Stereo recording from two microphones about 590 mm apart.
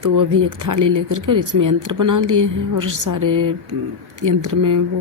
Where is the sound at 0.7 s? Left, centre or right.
Right.